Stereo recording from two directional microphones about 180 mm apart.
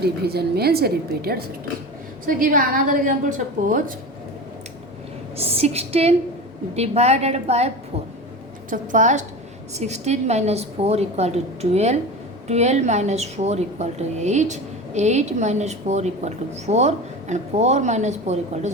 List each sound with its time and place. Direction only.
0.0 s a woman's voice: 60° right (ahead or behind)
5.4 s a woman's voice: 35° right (ahead or behind)
8.7 s a woman's voice: 45° right (ahead or behind)